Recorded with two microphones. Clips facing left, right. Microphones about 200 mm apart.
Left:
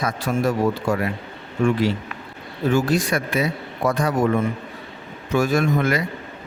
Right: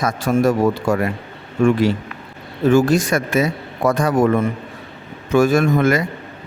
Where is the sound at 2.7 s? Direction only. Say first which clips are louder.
Right 5 dB; 45° right (ahead or behind).